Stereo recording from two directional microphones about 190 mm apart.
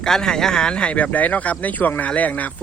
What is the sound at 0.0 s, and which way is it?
Speech, 5° left (ahead or behind).